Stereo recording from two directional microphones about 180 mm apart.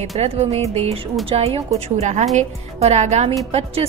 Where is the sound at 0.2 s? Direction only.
35° right (ahead or behind).